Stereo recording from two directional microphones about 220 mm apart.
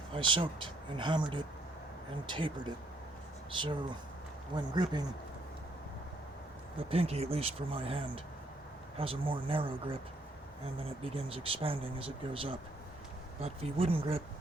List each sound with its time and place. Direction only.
0.1 s speech: 20° right (ahead or behind)
6.7 s speech: 25° right (ahead or behind)